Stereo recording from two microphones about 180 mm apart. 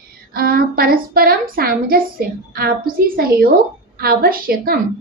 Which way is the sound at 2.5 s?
55° right (ahead or behind).